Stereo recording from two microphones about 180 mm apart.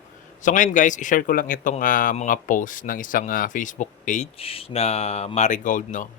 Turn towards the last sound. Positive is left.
turn(degrees=45)  # may be behind; listen again after turning